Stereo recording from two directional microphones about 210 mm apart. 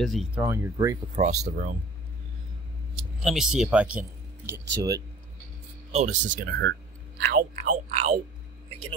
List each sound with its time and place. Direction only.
0.0 s speech: centre (ahead or behind)
1.1 s speech: 35° right (ahead or behind)
3.2 s speech: centre (ahead or behind)
5.9 s a sound: 30° right (ahead or behind)
6.4 s speech: 55° right (ahead or behind)
7.3 s speech: 40° right (ahead or behind)